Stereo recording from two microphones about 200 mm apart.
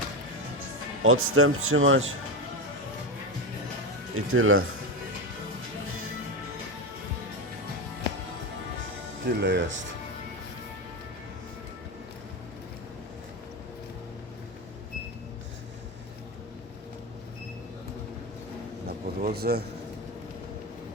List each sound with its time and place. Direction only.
1.0 s speech: 90° right
4.1 s speech: 90° right
9.2 s speech: 60° right (ahead or behind)
18.9 s a sound: 50° right (ahead or behind)